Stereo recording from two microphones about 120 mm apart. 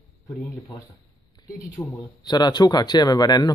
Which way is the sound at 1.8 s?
10° left (ahead or behind).